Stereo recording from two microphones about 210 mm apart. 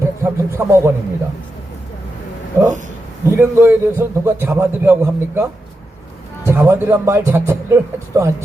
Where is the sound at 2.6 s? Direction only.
10° right (ahead or behind).